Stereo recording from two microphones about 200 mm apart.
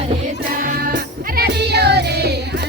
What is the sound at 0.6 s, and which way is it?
Music, 45° right (ahead or behind).